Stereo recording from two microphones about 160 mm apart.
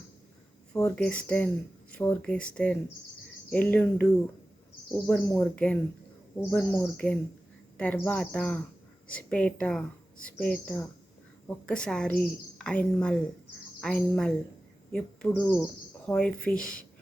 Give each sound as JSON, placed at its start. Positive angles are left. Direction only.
{"t": 0.7, "sound": "a woman's voice", "side_deg": 10}
{"t": 5.0, "sound": "a woman's voice", "side_deg": 10}